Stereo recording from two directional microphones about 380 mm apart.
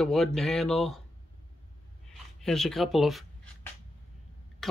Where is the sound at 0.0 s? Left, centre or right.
Centre.